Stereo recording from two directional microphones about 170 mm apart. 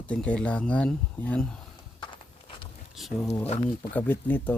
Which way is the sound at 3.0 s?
Centre (ahead or behind).